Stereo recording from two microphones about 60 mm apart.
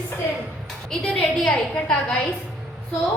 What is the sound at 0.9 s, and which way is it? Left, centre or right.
Speech, centre.